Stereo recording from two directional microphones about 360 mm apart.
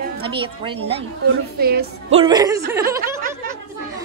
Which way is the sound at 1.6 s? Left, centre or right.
Right.